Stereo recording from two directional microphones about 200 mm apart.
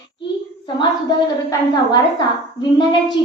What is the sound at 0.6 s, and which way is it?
A woman's voice, 20° left (ahead or behind).